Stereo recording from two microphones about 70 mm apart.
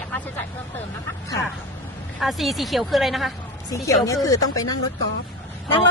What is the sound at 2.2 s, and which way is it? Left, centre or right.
Speech, centre.